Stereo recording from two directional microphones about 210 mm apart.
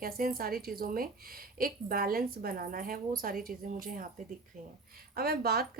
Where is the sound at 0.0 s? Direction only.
45° right (ahead or behind).